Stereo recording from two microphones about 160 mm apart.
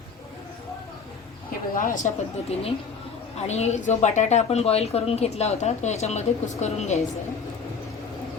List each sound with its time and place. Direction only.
1.7 s speech: 55° left (ahead or behind)